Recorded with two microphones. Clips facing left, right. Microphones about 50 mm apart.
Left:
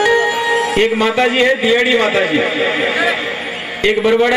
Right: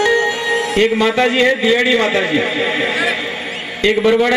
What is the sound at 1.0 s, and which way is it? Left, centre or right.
A man's voice, centre.